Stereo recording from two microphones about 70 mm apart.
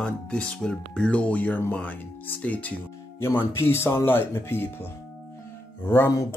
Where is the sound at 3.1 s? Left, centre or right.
Left.